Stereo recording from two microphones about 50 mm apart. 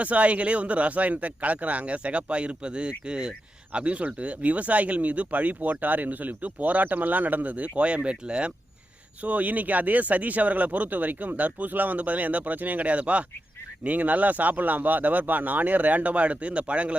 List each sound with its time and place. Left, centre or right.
0.0 s speech: right